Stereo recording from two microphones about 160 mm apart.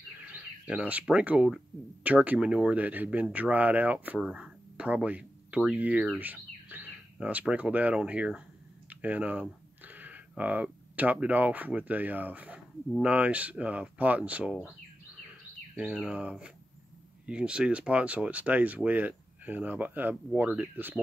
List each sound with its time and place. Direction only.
0.2 s speech: 10° right (ahead or behind)